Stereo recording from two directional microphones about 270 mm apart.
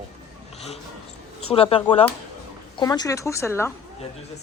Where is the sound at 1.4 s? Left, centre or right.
Left.